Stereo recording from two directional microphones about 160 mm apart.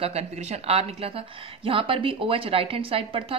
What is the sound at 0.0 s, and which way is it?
A woman's voice, 40° right (ahead or behind).